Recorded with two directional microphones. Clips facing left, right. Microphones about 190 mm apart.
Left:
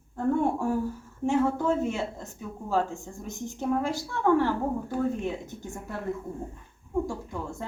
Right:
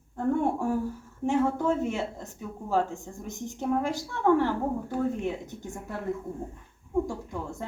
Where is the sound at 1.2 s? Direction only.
15° right (ahead or behind).